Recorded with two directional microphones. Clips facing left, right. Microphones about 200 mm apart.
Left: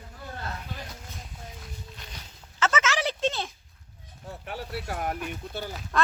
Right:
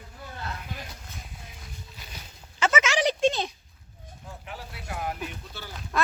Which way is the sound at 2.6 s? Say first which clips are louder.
Right 2 dB; 10° right (ahead or behind).